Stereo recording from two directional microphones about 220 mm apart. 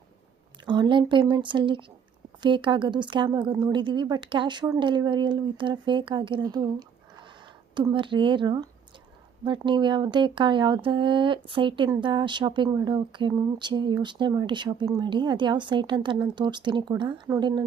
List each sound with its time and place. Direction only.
0.6 s speech: 20° right (ahead or behind)